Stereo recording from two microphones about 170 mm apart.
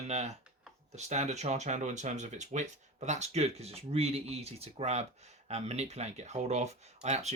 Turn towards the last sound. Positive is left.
turn(degrees=-40)  # may be behind; listen again after turning